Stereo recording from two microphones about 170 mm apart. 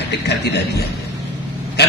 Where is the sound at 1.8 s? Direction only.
75° left (ahead or behind).